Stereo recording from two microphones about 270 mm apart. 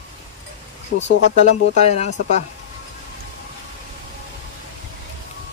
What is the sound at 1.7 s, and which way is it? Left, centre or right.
Speech, left.